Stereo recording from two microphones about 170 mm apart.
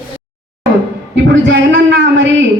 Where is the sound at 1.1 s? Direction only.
90° right.